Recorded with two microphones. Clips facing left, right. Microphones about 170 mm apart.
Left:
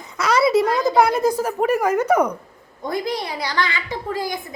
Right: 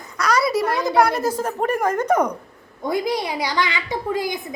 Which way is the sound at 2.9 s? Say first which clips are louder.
Right 2 dB; 15° right (ahead or behind).